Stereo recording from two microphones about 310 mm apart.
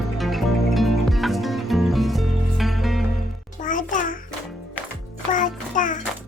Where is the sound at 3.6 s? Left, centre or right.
Left.